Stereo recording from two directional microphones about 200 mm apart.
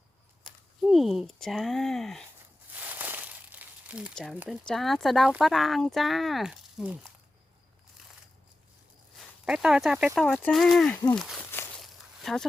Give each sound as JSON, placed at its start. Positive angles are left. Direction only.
{"t": 0.8, "sound": "speech", "side_deg": 0}
{"t": 9.1, "sound": "speech", "side_deg": 0}
{"t": 11.8, "sound": "walk", "side_deg": 0}